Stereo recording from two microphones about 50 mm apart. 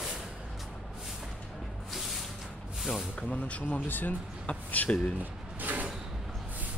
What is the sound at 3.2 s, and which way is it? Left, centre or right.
Speech, left.